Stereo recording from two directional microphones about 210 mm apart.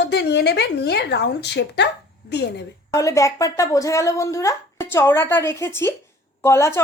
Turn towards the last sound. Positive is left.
turn(degrees=10)  # may be behind; listen again after turning